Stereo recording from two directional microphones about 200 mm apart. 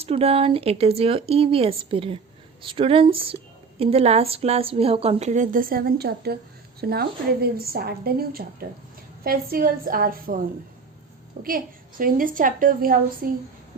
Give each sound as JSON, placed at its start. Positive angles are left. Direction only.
{"t": 0.0, "sound": "a woman's voice", "side_deg": -30}
{"t": 11.4, "sound": "a woman's voice", "side_deg": -45}